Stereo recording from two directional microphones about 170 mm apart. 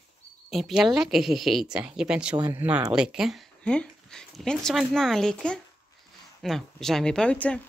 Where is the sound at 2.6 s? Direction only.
10° right (ahead or behind); by 7.6 s 5° left (ahead or behind).